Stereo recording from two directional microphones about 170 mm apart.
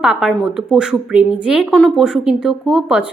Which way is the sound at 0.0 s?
5° right (ahead or behind).